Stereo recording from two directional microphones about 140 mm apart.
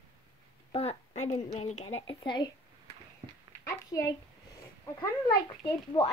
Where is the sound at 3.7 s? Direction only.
25° left (ahead or behind).